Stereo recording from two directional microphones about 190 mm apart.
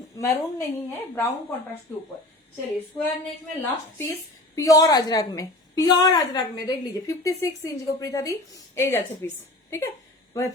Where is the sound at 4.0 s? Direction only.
15° left (ahead or behind).